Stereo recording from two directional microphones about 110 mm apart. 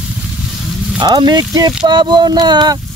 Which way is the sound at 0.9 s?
45° right (ahead or behind).